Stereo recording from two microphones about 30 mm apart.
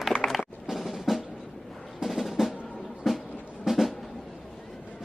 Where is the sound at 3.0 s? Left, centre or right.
Centre.